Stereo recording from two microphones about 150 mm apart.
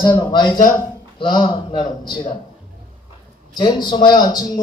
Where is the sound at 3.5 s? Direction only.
30° left (ahead or behind).